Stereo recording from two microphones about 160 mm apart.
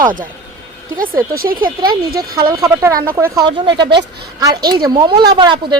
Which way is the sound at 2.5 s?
20° right (ahead or behind).